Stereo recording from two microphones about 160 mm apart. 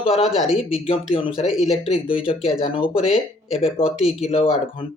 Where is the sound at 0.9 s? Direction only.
35° left (ahead or behind).